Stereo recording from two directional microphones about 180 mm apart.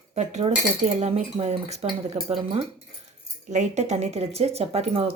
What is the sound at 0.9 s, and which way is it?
Speech, 35° right (ahead or behind).